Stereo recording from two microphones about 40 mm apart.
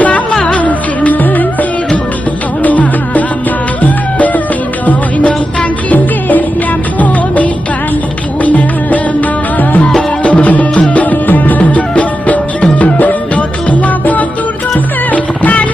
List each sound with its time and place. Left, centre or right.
0.5 s music: left
5.9 s music: left